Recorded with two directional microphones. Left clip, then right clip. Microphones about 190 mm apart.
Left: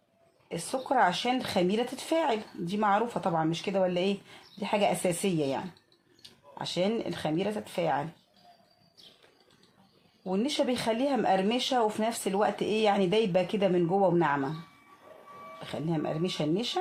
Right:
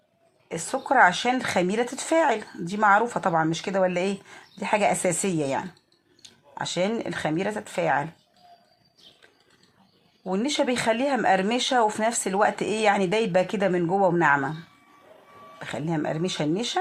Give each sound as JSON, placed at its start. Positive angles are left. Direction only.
{"t": 0.4, "sound": "speech", "side_deg": -15}
{"t": 10.2, "sound": "speech", "side_deg": -15}
{"t": 15.6, "sound": "speech", "side_deg": -15}